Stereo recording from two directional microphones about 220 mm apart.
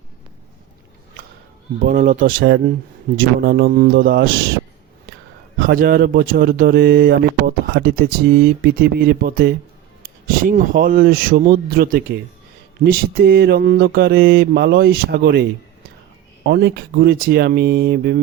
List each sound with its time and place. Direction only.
1.8 s speech: 35° right (ahead or behind)
5.5 s speech: 40° right (ahead or behind)